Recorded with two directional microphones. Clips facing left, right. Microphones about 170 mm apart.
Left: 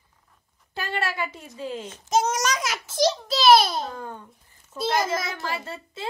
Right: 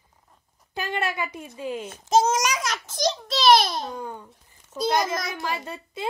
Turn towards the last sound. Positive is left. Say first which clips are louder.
# even
turn(degrees=-15)  # may be behind; listen again after turning